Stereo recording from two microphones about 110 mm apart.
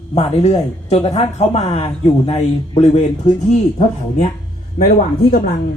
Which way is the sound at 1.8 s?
55° left (ahead or behind).